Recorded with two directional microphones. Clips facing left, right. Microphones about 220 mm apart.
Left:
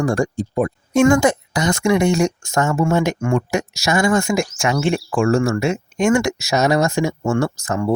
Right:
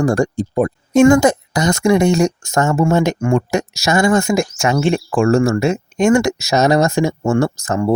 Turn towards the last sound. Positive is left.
turn(degrees=-40)  # may be behind; listen again after turning